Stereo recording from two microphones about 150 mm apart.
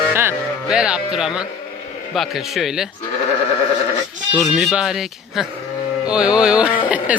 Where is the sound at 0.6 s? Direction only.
5° right (ahead or behind).